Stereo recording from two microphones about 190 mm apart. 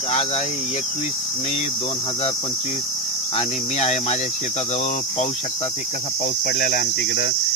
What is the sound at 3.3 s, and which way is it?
Cricket, 35° left (ahead or behind).